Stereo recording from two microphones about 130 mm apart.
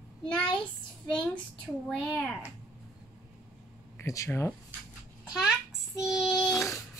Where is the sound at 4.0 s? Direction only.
25° left (ahead or behind).